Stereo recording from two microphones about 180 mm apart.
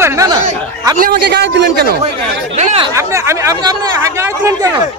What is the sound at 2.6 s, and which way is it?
Speech, 35° right (ahead or behind).